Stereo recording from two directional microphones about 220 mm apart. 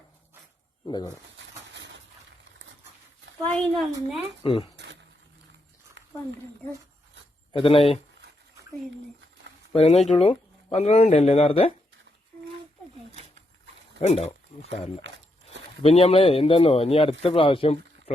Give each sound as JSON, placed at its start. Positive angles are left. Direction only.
{"t": 0.9, "sound": "speech", "side_deg": 20}
{"t": 1.4, "sound": "a sound", "side_deg": -55}
{"t": 3.5, "sound": "speech", "side_deg": 0}
{"t": 4.4, "sound": "speech", "side_deg": 25}
{"t": 6.0, "sound": "a sound", "side_deg": -55}
{"t": 7.5, "sound": "speech", "side_deg": 25}
{"t": 9.7, "sound": "speech", "side_deg": 30}
{"t": 14.0, "sound": "speech", "side_deg": 30}